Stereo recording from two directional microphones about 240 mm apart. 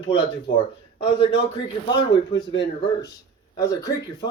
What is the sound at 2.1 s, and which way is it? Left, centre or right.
Speech, left.